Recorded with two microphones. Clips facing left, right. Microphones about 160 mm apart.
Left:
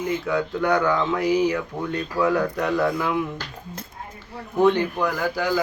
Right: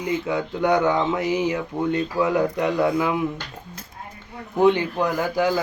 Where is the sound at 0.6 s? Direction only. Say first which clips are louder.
Right 3 dB; 20° right (ahead or behind).